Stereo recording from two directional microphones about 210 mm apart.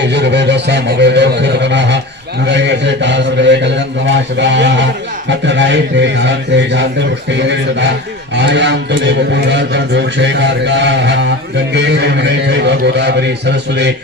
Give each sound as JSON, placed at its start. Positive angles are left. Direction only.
{"t": 0.1, "sound": "a man's voice", "side_deg": -55}